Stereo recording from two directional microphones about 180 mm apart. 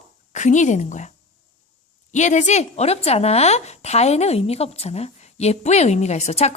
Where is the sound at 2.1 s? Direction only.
40° left (ahead or behind).